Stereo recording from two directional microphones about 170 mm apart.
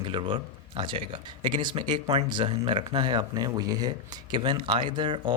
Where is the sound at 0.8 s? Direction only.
30° right (ahead or behind).